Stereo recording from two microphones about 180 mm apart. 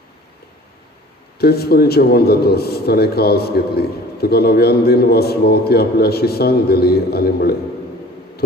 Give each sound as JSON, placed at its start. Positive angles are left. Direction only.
{"t": 1.4, "sound": "a man's voice", "side_deg": 60}